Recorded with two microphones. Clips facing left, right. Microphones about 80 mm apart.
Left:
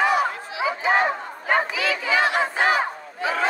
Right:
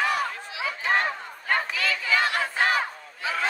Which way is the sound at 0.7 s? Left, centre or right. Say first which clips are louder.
Left 5 dB; centre.